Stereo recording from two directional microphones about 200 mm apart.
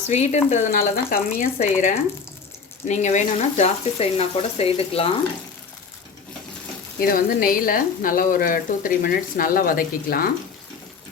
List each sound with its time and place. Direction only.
0.1 s speech: 35° left (ahead or behind)
7.0 s speech: 45° left (ahead or behind)